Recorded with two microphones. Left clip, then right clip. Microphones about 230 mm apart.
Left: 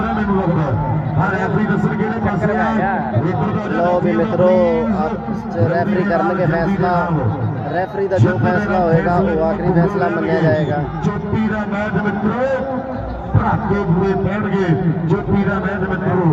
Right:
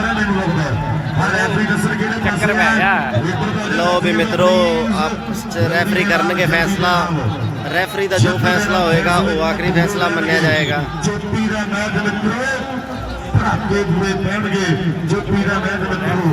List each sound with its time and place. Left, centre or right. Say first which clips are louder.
2.2 s a sound: right 4 dB; right
4.4 s speech: even; right
6.1 s a man's voice: right 1 dB; centre
8.8 s a man's voice: right 1 dB; centre
10.0 s a man's voice: right 1 dB; right